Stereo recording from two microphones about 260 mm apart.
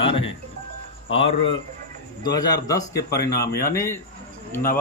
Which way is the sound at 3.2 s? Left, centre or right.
Left.